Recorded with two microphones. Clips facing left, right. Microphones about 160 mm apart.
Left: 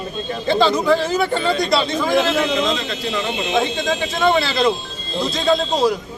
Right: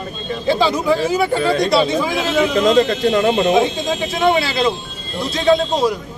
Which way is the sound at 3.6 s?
5° right (ahead or behind).